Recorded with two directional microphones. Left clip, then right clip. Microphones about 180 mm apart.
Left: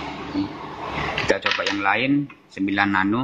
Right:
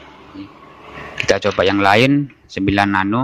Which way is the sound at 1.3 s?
40° right (ahead or behind).